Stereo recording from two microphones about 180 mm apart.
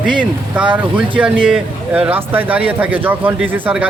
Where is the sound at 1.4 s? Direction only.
5° right (ahead or behind).